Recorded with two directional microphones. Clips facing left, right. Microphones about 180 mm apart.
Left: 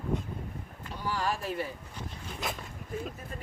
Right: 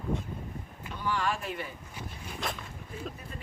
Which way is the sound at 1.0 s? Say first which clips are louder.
Even; 35° left (ahead or behind).